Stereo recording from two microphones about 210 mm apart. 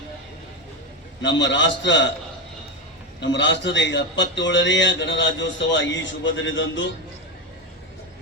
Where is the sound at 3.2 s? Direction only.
60° left (ahead or behind).